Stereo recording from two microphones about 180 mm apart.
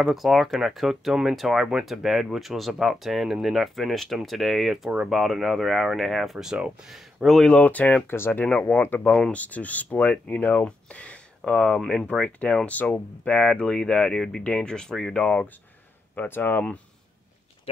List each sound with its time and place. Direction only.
0.0 s speech: centre (ahead or behind)